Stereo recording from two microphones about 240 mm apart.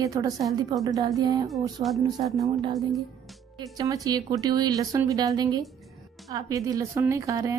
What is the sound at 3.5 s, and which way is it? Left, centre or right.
Speech, centre.